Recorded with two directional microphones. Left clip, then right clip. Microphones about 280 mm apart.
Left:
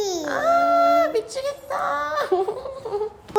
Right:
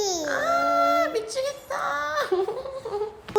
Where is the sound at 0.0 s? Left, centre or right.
Centre.